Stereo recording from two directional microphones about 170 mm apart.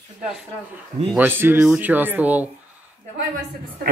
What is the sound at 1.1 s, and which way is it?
Speech, 10° right (ahead or behind).